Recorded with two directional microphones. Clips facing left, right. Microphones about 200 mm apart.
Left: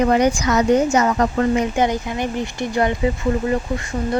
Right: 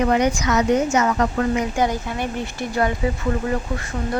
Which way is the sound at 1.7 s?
20° left (ahead or behind).